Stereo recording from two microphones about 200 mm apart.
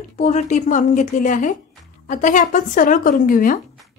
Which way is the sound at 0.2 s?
35° left (ahead or behind).